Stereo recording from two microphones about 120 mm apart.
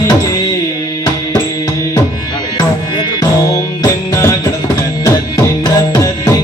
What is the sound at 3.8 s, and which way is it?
Music, 25° left (ahead or behind).